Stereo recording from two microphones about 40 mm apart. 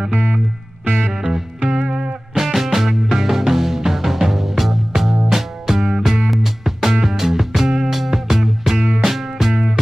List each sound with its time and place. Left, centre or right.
0.0 s music: right
0.8 s music: right
1.1 s music: centre